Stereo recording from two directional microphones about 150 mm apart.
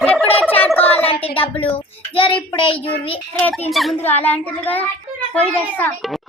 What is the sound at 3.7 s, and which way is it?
Speech, centre (ahead or behind).